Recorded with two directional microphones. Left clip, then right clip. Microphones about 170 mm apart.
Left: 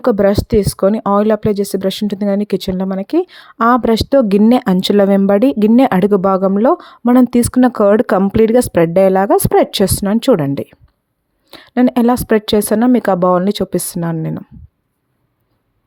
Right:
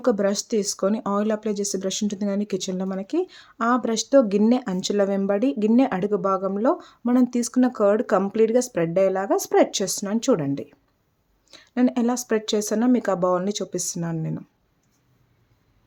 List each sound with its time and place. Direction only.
0.0 s speech: 50° left (ahead or behind)